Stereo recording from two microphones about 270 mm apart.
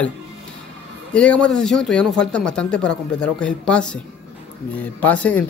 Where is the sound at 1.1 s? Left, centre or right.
Centre.